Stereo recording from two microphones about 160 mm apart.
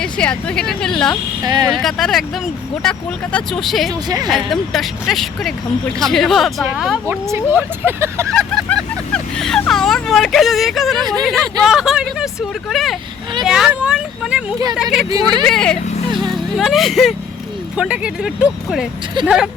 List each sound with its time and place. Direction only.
0.0 s speech: 5° left (ahead or behind)
1.5 s speech: 25° right (ahead or behind)
1.7 s speech: centre (ahead or behind)
7.1 s speech: 15° right (ahead or behind)
8.3 s speech: 5° left (ahead or behind)
15.1 s speech: 25° right (ahead or behind)
15.4 s speech: 5° left (ahead or behind)